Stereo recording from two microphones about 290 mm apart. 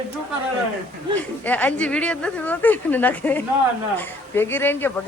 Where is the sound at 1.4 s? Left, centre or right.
Centre.